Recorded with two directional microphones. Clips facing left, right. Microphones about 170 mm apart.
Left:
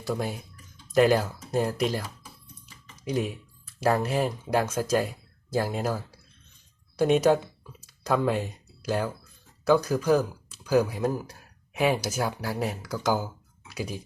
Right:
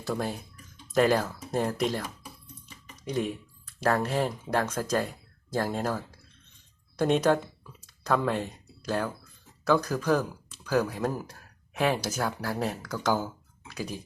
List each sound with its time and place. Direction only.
0.1 s speech: 10° left (ahead or behind)
3.0 s speech: 5° left (ahead or behind)
7.0 s speech: 10° left (ahead or behind)
9.6 s speech: 10° left (ahead or behind)